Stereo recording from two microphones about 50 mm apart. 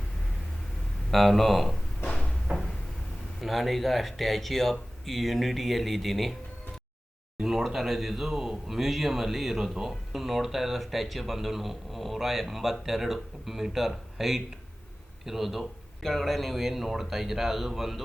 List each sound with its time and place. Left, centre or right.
1.1 s speech: centre
2.5 s a sound: centre
3.4 s speech: centre
7.4 s speech: centre